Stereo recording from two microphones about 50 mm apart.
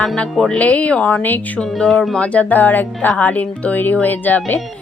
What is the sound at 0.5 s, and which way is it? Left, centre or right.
Speech, left.